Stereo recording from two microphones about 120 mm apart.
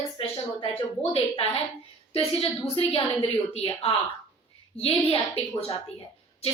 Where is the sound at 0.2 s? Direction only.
50° left (ahead or behind).